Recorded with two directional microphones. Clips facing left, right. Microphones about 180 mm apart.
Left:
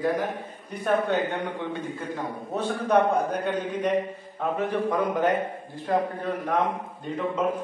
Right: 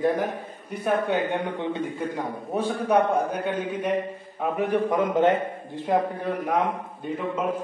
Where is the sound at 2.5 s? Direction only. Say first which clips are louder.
Right 1 dB; 10° right (ahead or behind).